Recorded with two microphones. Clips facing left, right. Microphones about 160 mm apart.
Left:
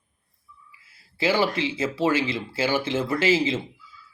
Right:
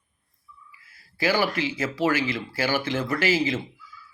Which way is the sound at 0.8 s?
25° left (ahead or behind).